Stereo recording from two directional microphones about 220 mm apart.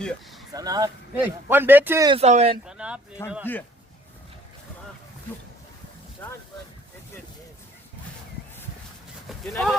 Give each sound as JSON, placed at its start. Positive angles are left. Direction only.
{"t": 0.0, "sound": "speech", "side_deg": 0}
{"t": 0.5, "sound": "speech", "side_deg": -15}
{"t": 2.0, "sound": "speech", "side_deg": -30}
{"t": 2.6, "sound": "a sound", "side_deg": -5}
{"t": 3.2, "sound": "speech", "side_deg": 10}
{"t": 9.5, "sound": "speech", "side_deg": 0}